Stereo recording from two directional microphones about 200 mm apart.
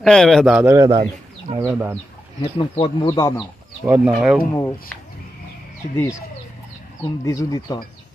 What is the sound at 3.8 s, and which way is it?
Speech, 10° right (ahead or behind).